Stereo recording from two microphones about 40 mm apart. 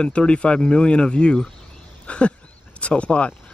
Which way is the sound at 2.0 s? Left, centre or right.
Left.